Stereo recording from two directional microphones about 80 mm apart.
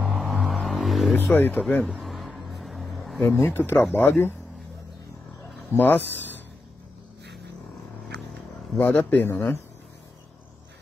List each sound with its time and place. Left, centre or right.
0.0 s vehicle: centre
1.1 s speech: left
2.0 s vehicle: centre
3.3 s speech: left
5.8 s speech: left
8.7 s speech: left